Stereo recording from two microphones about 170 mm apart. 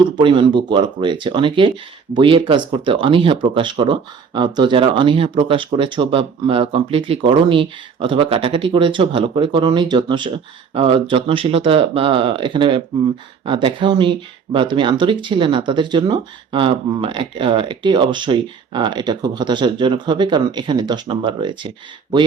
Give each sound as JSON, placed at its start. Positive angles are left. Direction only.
{"t": 0.2, "sound": "speech", "side_deg": -30}